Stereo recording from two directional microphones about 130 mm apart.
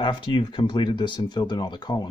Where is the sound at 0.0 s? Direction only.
40° left (ahead or behind).